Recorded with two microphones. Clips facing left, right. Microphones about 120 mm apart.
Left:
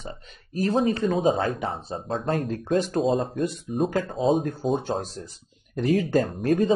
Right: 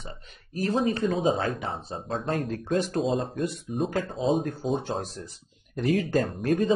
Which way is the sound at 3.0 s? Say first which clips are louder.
Left 3 dB; centre (ahead or behind).